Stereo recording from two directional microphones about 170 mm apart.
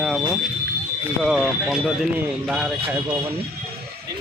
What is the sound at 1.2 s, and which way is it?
Speech, centre (ahead or behind).